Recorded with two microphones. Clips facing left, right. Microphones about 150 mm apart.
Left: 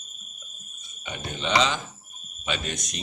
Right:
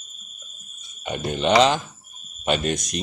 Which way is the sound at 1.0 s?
55° right (ahead or behind).